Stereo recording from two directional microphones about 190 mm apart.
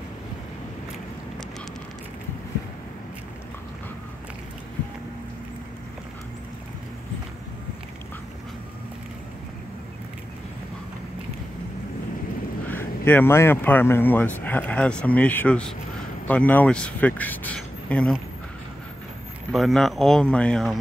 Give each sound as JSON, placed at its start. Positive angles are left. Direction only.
{"t": 12.6, "sound": "speech", "side_deg": 10}
{"t": 19.5, "sound": "speech", "side_deg": 0}